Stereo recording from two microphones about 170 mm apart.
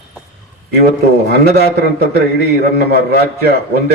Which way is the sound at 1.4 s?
70° right (ahead or behind).